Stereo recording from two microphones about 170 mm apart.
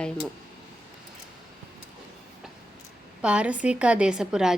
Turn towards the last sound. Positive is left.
turn(degrees=-5)  # may be behind; listen again after turning